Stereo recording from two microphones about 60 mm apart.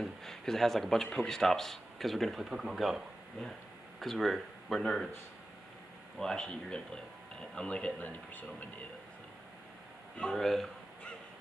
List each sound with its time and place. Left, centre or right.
0.0 s speech: centre
4.0 s speech: centre
6.1 s speech: centre
8.0 s speech: left
10.3 s speech: centre